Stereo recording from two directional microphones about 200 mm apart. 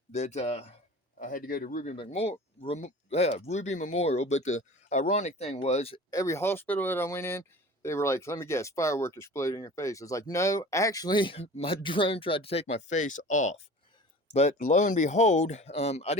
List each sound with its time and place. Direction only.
0.1 s speech: 35° left (ahead or behind)
2.0 s speech: 30° left (ahead or behind)
6.1 s speech: 15° left (ahead or behind); by 16.1 s 30° left (ahead or behind)